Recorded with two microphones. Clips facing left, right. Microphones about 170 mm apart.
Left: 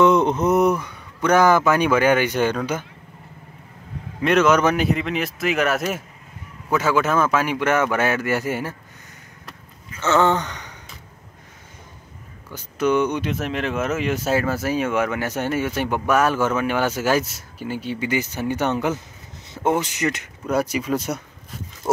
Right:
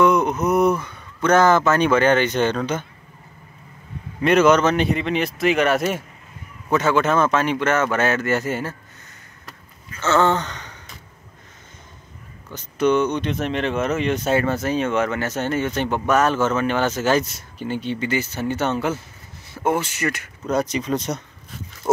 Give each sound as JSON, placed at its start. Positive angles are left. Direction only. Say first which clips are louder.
{"t": 0.0, "sound": "speech", "louder": "left 1 dB", "side_deg": 25}
{"t": 4.2, "sound": "speech", "louder": "right 2 dB", "side_deg": 0}
{"t": 9.8, "sound": "a sound", "louder": "even", "side_deg": 15}
{"t": 12.5, "sound": "speech", "louder": "right 1 dB", "side_deg": 10}
{"t": 20.4, "sound": "speech", "louder": "even", "side_deg": 10}